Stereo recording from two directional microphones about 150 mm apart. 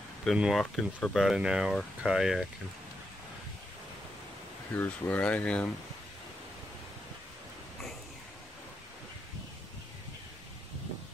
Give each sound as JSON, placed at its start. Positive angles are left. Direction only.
{"t": 0.2, "sound": "speech", "side_deg": 0}
{"t": 4.7, "sound": "speech", "side_deg": 10}